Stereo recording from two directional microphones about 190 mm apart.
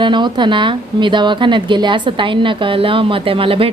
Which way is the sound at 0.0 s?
25° right (ahead or behind).